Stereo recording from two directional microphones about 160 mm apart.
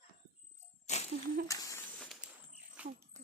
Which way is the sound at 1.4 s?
20° left (ahead or behind).